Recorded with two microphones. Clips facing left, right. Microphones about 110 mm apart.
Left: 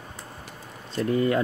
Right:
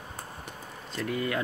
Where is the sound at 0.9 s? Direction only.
35° left (ahead or behind).